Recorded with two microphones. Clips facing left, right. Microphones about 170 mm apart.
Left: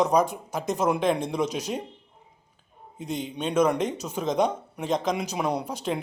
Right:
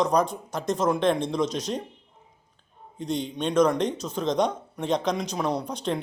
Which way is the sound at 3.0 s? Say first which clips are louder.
Right 2 dB; 5° left (ahead or behind).